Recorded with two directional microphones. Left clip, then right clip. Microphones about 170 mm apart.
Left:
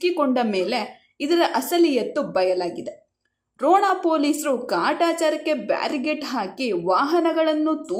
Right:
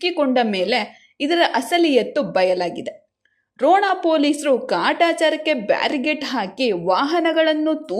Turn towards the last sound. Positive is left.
turn(degrees=-15)  # may be behind; listen again after turning